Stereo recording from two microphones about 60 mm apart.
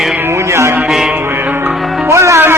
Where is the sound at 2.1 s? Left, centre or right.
Right.